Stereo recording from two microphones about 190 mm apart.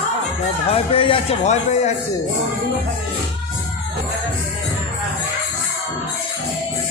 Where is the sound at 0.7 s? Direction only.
30° left (ahead or behind).